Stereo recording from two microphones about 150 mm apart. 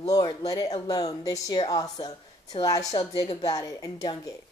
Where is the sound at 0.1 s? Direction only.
25° left (ahead or behind).